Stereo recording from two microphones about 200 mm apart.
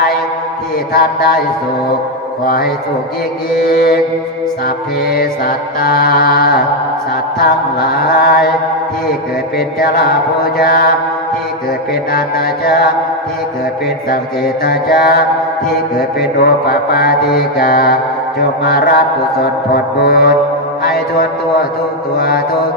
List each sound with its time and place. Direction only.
0.9 s mantra: 50° left (ahead or behind)
3.7 s mantra: 50° left (ahead or behind)
5.0 s mantra: 50° left (ahead or behind)
9.6 s mantra: 50° left (ahead or behind)
12.6 s mantra: 45° left (ahead or behind)
14.1 s mantra: 50° left (ahead or behind)